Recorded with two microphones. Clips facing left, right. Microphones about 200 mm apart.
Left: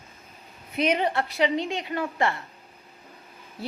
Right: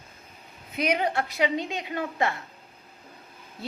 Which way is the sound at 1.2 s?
15° right (ahead or behind).